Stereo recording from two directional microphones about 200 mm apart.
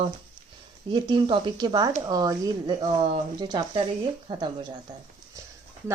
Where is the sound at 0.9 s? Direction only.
20° right (ahead or behind).